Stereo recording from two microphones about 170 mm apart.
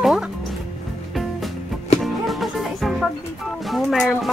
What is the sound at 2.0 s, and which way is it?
Music, centre (ahead or behind).